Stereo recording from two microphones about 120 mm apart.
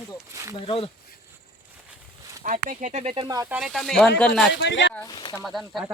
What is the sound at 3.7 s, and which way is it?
Speech, 5° left (ahead or behind).